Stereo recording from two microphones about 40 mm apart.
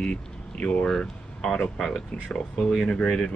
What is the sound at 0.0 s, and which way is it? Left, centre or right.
Speech, left.